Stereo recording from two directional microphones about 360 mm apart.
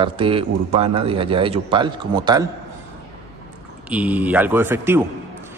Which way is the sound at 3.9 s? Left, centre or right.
Centre.